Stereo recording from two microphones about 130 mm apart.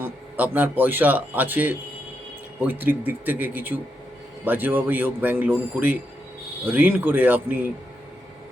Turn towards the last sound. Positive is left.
turn(degrees=-15)  # may be behind; listen again after turning